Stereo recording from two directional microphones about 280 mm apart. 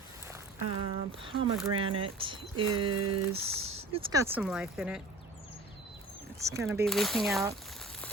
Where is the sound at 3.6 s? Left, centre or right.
Right.